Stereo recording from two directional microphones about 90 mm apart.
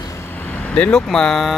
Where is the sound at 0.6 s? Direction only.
15° left (ahead or behind).